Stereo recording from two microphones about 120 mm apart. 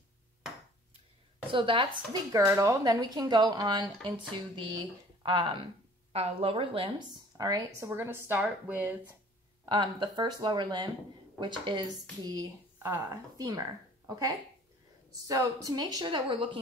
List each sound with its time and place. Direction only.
1.5 s speech: 45° right (ahead or behind)
2.3 s a woman's voice: 25° right (ahead or behind); by 5.7 s 45° right (ahead or behind)
6.1 s speech: 55° right (ahead or behind); by 7.9 s 30° right (ahead or behind)
7.9 s a woman's voice: 20° right (ahead or behind)
9.7 s a woman's voice: 40° right (ahead or behind)
12.7 s a woman's voice: 20° right (ahead or behind); by 16.4 s 45° right (ahead or behind)